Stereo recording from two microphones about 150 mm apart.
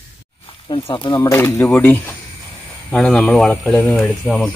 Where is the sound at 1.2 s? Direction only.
15° left (ahead or behind).